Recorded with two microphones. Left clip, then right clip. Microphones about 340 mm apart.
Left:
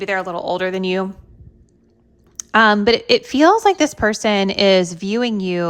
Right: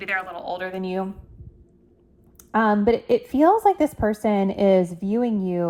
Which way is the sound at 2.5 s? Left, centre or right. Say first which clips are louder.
Left 7 dB; right.